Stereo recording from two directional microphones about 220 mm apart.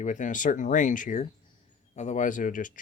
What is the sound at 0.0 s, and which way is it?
Speech, 35° left (ahead or behind).